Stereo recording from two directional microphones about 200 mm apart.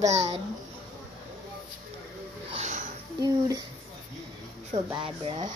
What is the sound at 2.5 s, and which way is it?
Music, 35° right (ahead or behind).